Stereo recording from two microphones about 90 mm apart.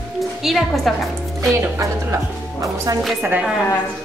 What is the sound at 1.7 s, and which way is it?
Speech, 35° right (ahead or behind).